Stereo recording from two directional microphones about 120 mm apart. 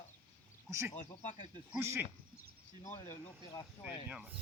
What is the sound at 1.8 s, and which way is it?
Speech, 20° right (ahead or behind).